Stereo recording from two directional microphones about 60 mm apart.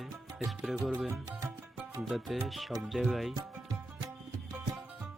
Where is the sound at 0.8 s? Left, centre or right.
Centre.